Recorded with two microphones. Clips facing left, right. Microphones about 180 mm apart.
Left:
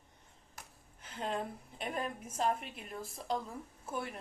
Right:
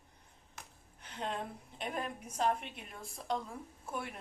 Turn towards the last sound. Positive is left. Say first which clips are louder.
# left 1 dB
turn(degrees=0)  # may be behind; listen again after turning